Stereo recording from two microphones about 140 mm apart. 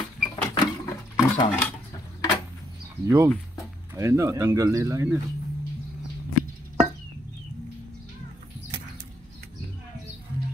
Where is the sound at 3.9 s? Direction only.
20° right (ahead or behind).